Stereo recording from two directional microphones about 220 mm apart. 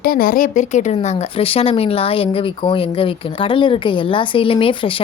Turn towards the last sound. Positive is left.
turn(degrees=25)  # may be behind; listen again after turning